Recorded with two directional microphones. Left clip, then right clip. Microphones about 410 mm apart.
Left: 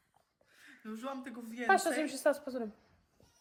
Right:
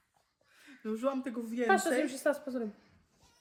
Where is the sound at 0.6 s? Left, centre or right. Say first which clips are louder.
Right 9 dB; centre.